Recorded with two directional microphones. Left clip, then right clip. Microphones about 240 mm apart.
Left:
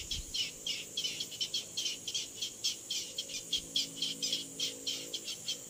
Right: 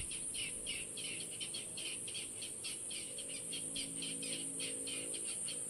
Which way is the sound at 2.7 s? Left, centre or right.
Left.